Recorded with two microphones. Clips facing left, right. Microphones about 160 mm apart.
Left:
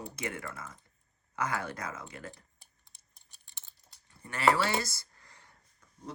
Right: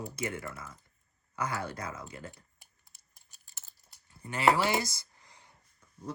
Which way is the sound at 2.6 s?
Centre (ahead or behind).